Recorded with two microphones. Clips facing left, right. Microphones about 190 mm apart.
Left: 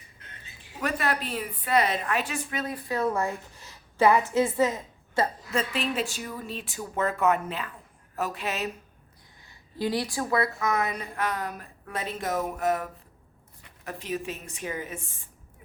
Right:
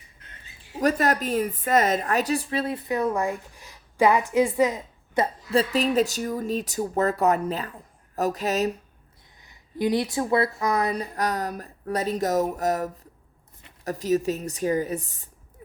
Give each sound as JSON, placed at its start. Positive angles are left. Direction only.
{"t": 0.8, "sound": "a woman's voice", "side_deg": -40}
{"t": 5.5, "sound": "a woman's voice", "side_deg": -35}
{"t": 9.5, "sound": "a woman's voice", "side_deg": -20}